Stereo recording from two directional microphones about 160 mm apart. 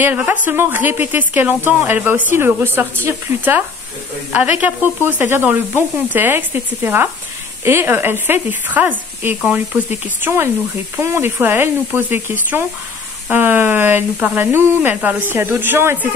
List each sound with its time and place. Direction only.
0.0 s a woman's voice: 10° right (ahead or behind)